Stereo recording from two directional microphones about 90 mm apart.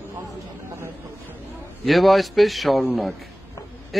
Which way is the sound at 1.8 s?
Centre (ahead or behind).